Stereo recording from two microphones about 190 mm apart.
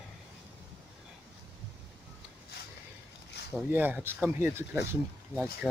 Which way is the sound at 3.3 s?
60° left (ahead or behind).